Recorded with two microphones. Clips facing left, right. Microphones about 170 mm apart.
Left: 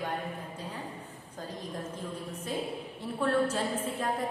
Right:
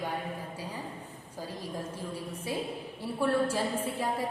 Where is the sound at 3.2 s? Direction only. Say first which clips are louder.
Even; 10° right (ahead or behind).